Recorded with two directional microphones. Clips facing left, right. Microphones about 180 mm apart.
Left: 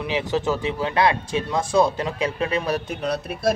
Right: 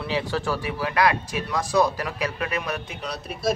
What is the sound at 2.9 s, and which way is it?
Speech, 55° left (ahead or behind).